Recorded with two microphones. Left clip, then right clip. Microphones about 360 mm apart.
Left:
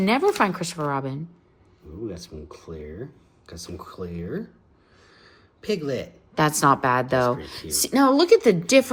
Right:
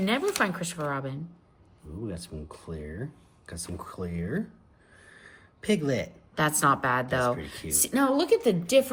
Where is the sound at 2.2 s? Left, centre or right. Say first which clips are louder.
Left 2 dB; centre.